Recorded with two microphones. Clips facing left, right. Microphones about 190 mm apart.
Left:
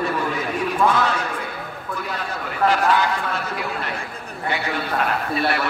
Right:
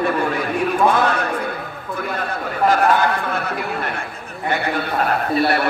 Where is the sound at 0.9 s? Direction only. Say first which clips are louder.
Right 3 dB; 55° right (ahead or behind).